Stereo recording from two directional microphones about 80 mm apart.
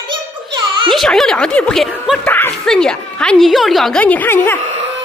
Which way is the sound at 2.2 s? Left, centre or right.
Left.